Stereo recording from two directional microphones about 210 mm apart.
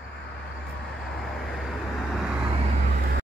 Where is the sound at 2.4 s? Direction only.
25° right (ahead or behind).